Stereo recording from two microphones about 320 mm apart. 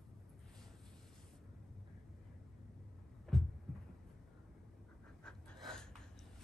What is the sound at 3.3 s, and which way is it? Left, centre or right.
Heart sounds, centre.